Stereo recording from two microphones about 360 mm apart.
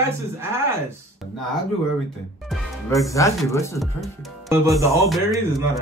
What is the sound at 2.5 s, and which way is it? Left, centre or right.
A man's voice, centre.